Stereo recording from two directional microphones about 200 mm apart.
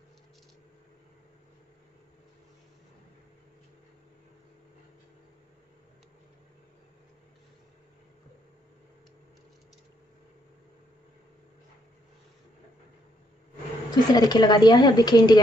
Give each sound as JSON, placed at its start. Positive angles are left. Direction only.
{"t": 13.8, "sound": "a woman's voice", "side_deg": 20}